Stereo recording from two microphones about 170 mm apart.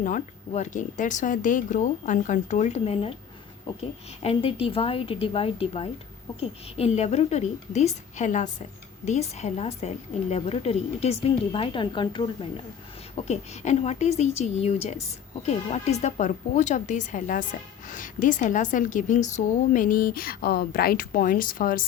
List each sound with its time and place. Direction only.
0.0 s a woman's voice: 50° left (ahead or behind); by 12.6 s 30° left (ahead or behind)
13.2 s a woman's voice: 40° left (ahead or behind)